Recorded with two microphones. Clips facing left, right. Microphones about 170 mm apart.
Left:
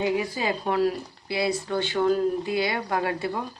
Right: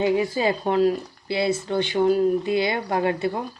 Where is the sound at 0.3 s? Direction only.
25° right (ahead or behind).